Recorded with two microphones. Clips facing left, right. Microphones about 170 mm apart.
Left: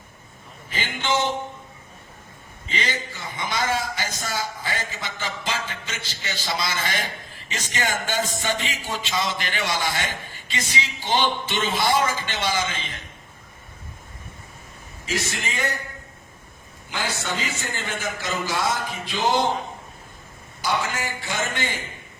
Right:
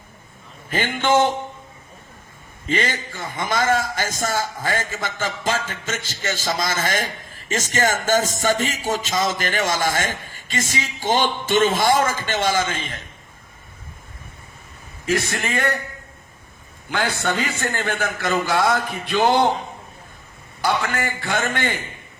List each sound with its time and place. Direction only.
0.7 s a man's voice: 55° right (ahead or behind)
2.6 s a man's voice: 50° right (ahead or behind)
15.0 s a man's voice: 55° right (ahead or behind)
16.9 s a man's voice: 55° right (ahead or behind)
20.6 s a man's voice: 60° right (ahead or behind)